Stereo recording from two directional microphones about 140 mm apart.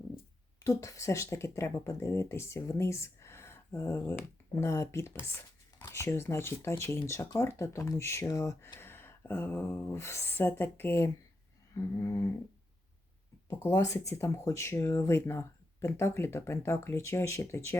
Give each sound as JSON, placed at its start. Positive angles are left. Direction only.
{"t": 0.6, "sound": "speech", "side_deg": 20}
{"t": 13.5, "sound": "speech", "side_deg": 15}